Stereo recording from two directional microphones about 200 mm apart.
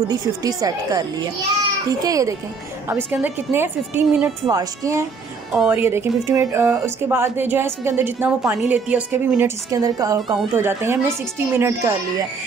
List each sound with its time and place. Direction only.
0.1 s speech: 20° right (ahead or behind)